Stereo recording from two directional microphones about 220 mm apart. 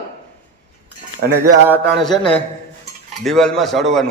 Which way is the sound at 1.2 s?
45° right (ahead or behind).